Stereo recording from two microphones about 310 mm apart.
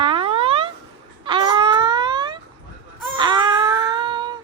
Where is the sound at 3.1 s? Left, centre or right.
Centre.